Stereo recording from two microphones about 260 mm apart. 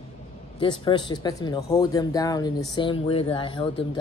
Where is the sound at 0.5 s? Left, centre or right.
Centre.